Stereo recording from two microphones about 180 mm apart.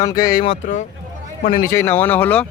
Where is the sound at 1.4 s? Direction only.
50° left (ahead or behind).